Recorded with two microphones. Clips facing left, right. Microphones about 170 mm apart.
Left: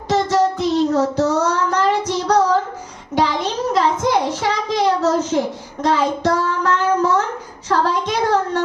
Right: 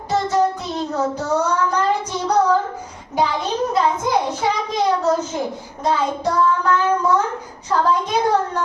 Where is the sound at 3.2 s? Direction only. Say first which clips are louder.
Left 1 dB; 90° left.